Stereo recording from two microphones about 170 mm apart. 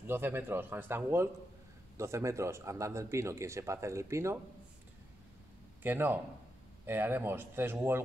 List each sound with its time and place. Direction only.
0.0 s speech: 15° right (ahead or behind)
5.8 s speech: 10° right (ahead or behind)